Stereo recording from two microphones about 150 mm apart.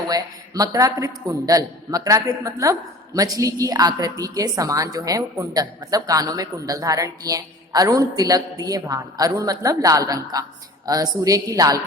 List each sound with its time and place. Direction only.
0.1 s a man's voice: 25° right (ahead or behind)